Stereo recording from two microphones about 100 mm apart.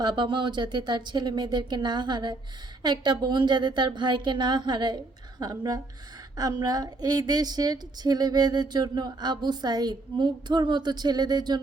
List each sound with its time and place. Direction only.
0.0 s a woman's voice: 45° right (ahead or behind)